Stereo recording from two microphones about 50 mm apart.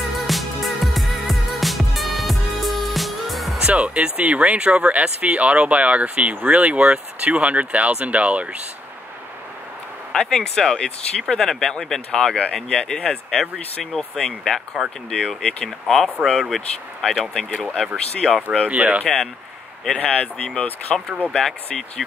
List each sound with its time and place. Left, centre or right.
0.1 s music: centre
3.5 s speech: right
10.1 s speech: centre
17.5 s speech: left
17.9 s speech: centre
18.7 s speech: right
19.9 s speech: left
20.9 s speech: centre